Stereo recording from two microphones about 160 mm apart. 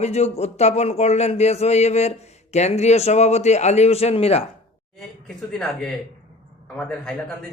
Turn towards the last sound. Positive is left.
turn(degrees=5)  # may be behind; listen again after turning